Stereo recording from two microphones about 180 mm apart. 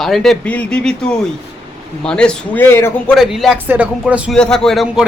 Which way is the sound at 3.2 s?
Centre (ahead or behind).